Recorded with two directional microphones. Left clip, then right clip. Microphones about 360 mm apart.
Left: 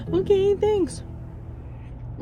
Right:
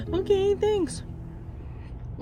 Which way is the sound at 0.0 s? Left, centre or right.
Centre.